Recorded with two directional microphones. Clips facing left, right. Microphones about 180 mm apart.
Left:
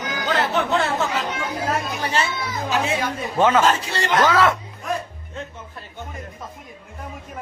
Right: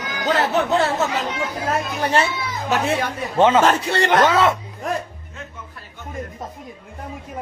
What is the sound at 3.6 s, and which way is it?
Speech, 60° right (ahead or behind).